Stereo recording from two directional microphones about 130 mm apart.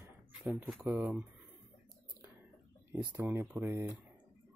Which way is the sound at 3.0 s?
25° right (ahead or behind).